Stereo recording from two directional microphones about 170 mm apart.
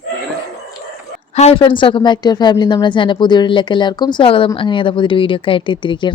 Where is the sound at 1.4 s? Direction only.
35° left (ahead or behind).